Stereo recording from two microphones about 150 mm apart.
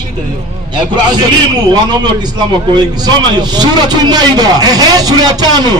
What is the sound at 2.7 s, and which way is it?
A man's voice, 30° right (ahead or behind).